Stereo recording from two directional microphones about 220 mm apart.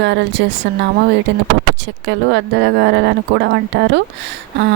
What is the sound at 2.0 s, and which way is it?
Speech, 55° right (ahead or behind).